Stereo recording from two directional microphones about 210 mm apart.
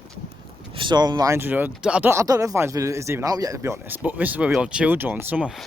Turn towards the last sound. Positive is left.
turn(degrees=-5)  # may be behind; listen again after turning